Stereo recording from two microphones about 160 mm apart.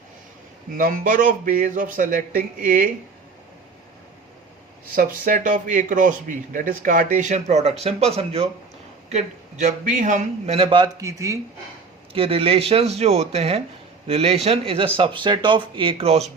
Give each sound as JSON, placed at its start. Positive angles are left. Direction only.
{"t": 0.8, "sound": "a man's voice", "side_deg": -60}
{"t": 4.9, "sound": "a man's voice", "side_deg": -60}
{"t": 12.1, "sound": "a man's voice", "side_deg": -35}